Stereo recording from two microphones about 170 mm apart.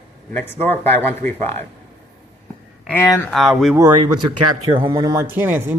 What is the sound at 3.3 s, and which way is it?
Speech, centre (ahead or behind).